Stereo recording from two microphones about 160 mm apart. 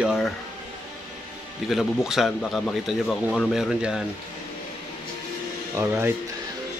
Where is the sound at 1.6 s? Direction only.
Centre (ahead or behind).